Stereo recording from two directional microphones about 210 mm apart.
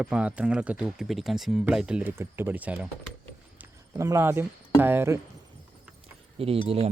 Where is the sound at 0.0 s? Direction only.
5° right (ahead or behind).